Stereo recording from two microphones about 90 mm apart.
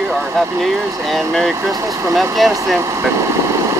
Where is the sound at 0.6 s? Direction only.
Centre (ahead or behind).